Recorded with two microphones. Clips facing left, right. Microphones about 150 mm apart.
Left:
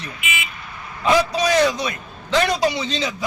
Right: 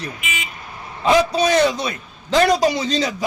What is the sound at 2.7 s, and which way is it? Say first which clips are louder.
Speech: right 4 dB; 40° right (ahead or behind).